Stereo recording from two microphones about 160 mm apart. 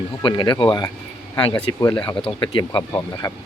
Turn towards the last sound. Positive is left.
turn(degrees=20)  # may be behind; listen again after turning